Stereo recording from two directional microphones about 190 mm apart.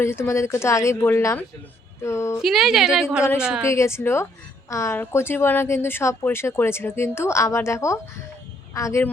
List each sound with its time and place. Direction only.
0.0 s speech: 15° left (ahead or behind)
2.4 s a woman's voice: centre (ahead or behind)
3.7 s a woman's voice: 15° left (ahead or behind)